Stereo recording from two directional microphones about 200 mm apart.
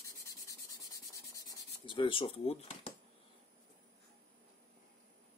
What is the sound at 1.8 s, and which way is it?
Speech, 25° left (ahead or behind).